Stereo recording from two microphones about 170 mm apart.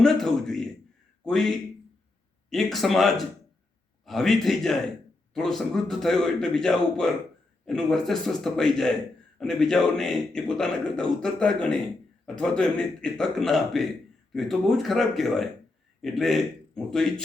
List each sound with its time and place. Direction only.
0.0 s a man's voice: centre (ahead or behind)